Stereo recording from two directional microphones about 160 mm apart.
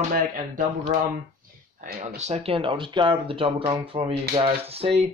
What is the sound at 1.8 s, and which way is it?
Speech, 65° right (ahead or behind).